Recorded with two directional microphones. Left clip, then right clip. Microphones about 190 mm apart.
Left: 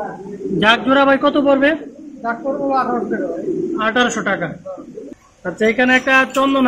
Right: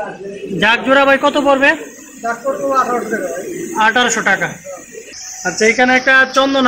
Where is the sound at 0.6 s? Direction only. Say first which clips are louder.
Right 2 dB; 10° right (ahead or behind).